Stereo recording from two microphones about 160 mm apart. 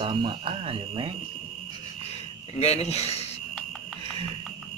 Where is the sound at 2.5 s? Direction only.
40° left (ahead or behind).